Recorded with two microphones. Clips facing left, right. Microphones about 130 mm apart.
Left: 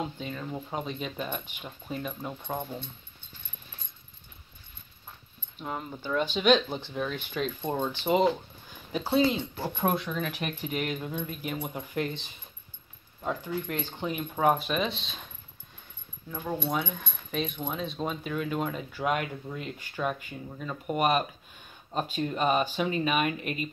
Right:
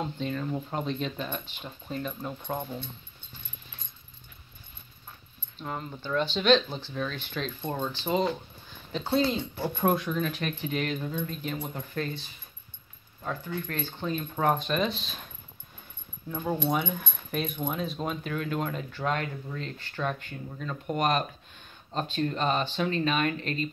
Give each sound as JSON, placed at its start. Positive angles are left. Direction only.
{"t": 0.2, "sound": "speech", "side_deg": 5}
{"t": 5.6, "sound": "speech", "side_deg": 10}
{"t": 8.9, "sound": "speech", "side_deg": 5}
{"t": 16.3, "sound": "speech", "side_deg": 0}